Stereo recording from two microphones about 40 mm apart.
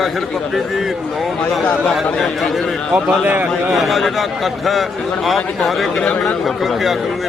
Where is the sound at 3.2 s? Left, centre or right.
Right.